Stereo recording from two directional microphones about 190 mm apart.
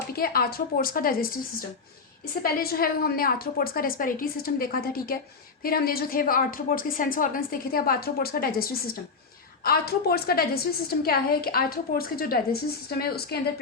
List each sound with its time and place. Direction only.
0.1 s a woman's voice: 50° left (ahead or behind)